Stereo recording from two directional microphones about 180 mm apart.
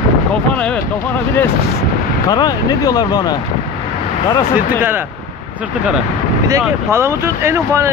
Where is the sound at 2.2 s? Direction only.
20° left (ahead or behind).